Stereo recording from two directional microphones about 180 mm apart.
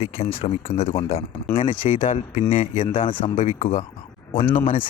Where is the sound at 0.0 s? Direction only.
35° left (ahead or behind).